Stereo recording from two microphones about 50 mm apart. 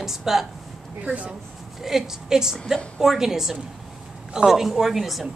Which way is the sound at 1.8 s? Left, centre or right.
Centre.